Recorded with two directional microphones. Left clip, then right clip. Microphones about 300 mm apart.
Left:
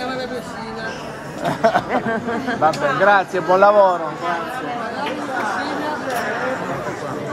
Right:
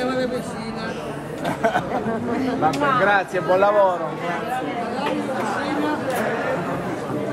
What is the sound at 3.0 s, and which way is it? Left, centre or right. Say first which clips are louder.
Speech: left 4 dB; left.